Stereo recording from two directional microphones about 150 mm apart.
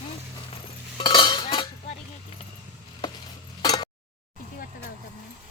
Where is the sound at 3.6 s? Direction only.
25° left (ahead or behind).